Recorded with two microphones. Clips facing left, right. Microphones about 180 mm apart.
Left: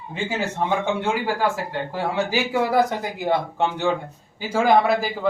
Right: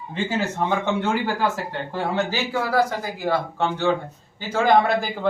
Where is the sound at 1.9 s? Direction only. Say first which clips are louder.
Even; 15° left (ahead or behind).